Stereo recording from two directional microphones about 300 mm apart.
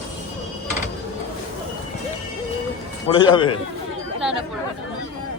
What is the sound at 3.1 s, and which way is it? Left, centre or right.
Speech, centre.